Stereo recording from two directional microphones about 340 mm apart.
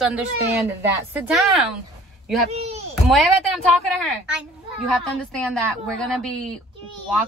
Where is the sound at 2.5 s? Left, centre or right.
Centre.